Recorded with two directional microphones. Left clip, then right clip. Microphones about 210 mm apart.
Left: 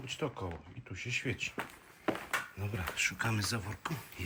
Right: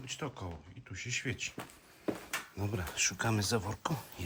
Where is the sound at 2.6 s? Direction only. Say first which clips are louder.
Even; 15° right (ahead or behind).